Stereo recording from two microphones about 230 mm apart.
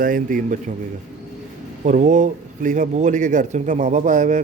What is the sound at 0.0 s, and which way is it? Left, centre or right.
Speech, right.